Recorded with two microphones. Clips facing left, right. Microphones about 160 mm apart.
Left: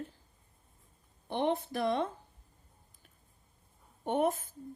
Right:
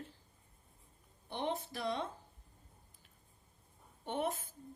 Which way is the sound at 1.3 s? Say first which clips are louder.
Left 7 dB; 60° left (ahead or behind).